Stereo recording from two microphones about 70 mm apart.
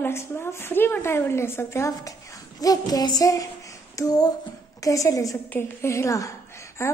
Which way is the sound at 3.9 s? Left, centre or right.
Left.